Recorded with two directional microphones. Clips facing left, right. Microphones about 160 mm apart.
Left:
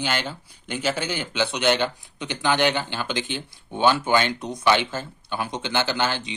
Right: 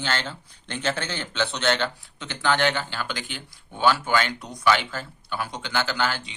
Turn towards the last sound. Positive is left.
turn(degrees=20)  # may be behind; listen again after turning